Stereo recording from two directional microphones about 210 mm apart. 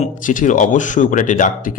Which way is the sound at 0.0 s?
40° left (ahead or behind).